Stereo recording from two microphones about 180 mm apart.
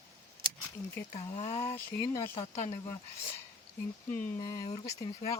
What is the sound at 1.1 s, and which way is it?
Speech, 35° left (ahead or behind).